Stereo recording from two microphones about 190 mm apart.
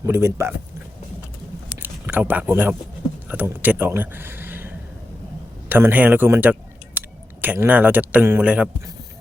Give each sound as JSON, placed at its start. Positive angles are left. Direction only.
{"t": 0.0, "sound": "speech", "side_deg": -15}
{"t": 1.8, "sound": "speech", "side_deg": -10}